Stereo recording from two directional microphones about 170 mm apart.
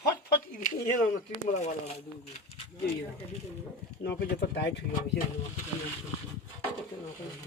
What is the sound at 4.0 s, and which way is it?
Speech, 75° left (ahead or behind).